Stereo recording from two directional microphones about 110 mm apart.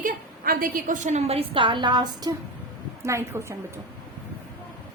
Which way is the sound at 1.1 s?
80° right.